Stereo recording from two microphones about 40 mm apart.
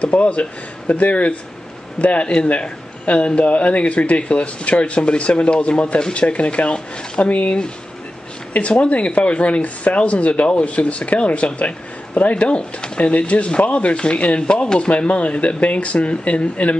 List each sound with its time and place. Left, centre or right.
0.0 s speech: left
8.5 s speech: left